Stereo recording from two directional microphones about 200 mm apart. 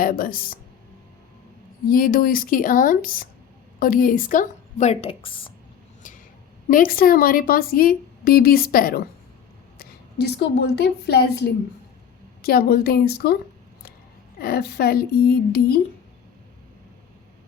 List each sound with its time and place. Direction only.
0.0 s a woman's voice: 45° left (ahead or behind)
1.9 s a woman's voice: 45° left (ahead or behind); by 5.5 s 25° left (ahead or behind)
6.7 s a woman's voice: 45° left (ahead or behind)
14.4 s a woman's voice: 50° left (ahead or behind)